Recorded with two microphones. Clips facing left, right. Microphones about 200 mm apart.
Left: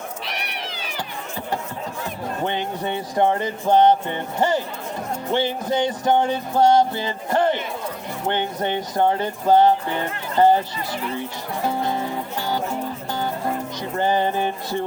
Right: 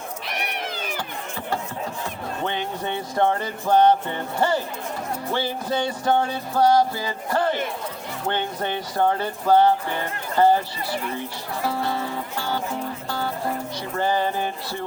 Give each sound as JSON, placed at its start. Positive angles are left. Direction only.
{"t": 0.4, "sound": "cat", "side_deg": -50}
{"t": 2.4, "sound": "music", "side_deg": 15}
{"t": 5.3, "sound": "speech", "side_deg": 20}
{"t": 11.6, "sound": "music", "side_deg": 20}
{"t": 13.9, "sound": "a sound", "side_deg": 20}